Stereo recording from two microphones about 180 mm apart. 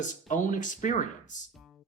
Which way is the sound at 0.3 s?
45° left (ahead or behind).